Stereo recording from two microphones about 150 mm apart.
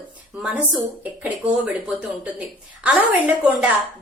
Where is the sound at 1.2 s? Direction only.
10° right (ahead or behind).